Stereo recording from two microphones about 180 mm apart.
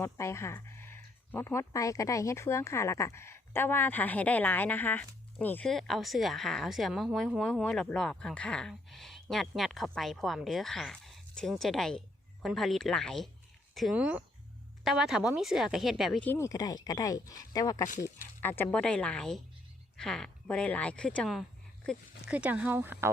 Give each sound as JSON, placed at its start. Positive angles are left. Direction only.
{"t": 0.0, "sound": "speech", "side_deg": 15}
{"t": 16.3, "sound": "speech", "side_deg": 15}
{"t": 22.3, "sound": "speech", "side_deg": -5}